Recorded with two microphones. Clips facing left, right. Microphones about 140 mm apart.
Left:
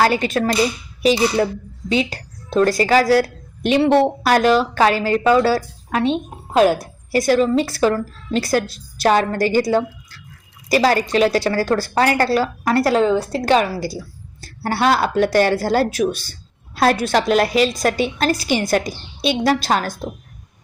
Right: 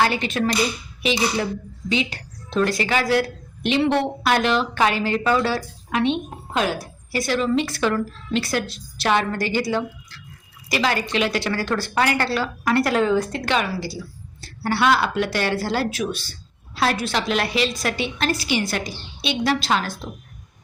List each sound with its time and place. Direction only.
0.0 s a woman's voice: 40° left (ahead or behind)